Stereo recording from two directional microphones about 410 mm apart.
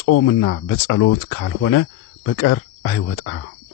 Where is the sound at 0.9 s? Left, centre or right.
Left.